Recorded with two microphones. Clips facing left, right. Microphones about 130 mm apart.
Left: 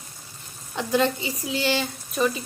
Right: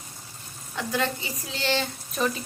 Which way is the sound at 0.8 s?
20° left (ahead or behind).